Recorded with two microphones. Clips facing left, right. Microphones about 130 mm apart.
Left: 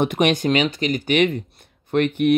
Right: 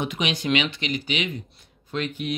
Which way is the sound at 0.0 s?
55° left (ahead or behind).